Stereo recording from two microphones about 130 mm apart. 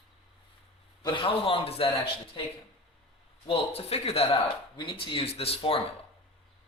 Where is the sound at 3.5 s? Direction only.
50° left (ahead or behind).